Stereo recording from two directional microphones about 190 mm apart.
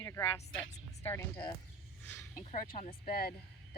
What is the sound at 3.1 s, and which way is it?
Speech, 55° left (ahead or behind).